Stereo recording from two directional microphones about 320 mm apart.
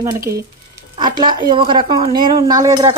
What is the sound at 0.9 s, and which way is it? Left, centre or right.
A woman's voice, centre.